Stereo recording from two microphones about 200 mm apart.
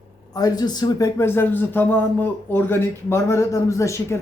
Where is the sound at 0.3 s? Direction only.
20° left (ahead or behind).